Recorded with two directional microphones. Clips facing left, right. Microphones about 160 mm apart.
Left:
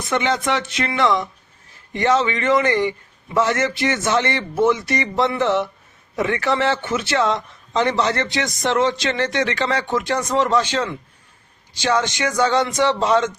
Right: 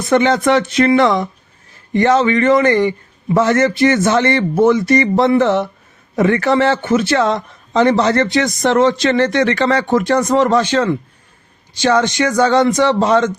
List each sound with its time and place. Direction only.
0.1 s a man's voice: 45° right (ahead or behind)